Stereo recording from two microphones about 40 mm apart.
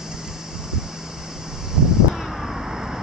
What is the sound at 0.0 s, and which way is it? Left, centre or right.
Vehicle, centre.